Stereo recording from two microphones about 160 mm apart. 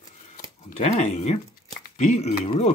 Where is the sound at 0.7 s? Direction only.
45° left (ahead or behind).